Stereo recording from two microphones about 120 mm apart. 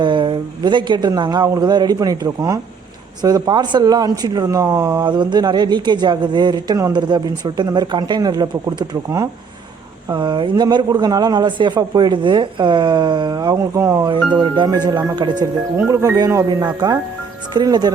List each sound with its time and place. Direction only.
0.0 s speech: 40° right (ahead or behind); by 5.0 s 25° right (ahead or behind)
5.0 s speech: 40° right (ahead or behind); by 14.1 s 25° right (ahead or behind)
14.1 s speech: 40° right (ahead or behind)
15.9 s speech: 25° right (ahead or behind)